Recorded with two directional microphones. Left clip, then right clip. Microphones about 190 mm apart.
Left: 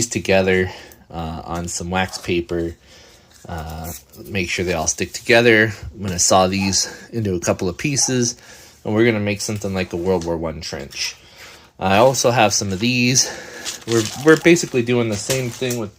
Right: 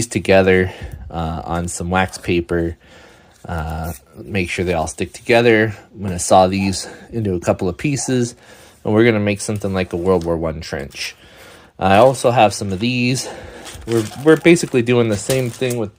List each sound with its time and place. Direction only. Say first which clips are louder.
0.0 s speech: right 4 dB; 35° right (ahead or behind)
11.8 s speech: right 3 dB; 30° right (ahead or behind)
12.0 s speech: right 2 dB; 20° right (ahead or behind)
14.4 s speech: right 2 dB; 30° right (ahead or behind); by 15.9 s 50° right (ahead or behind)